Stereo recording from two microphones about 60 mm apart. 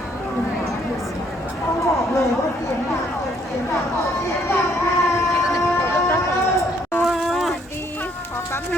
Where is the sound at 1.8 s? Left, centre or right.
Left.